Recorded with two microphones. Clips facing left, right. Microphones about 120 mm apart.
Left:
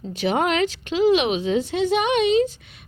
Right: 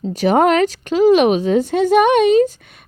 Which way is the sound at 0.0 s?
40° right (ahead or behind).